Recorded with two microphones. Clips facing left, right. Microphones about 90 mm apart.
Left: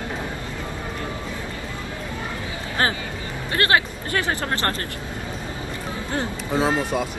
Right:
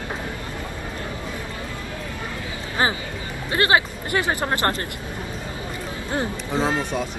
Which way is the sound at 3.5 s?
20° right (ahead or behind).